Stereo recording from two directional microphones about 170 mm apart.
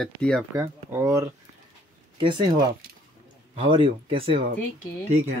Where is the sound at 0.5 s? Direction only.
15° right (ahead or behind).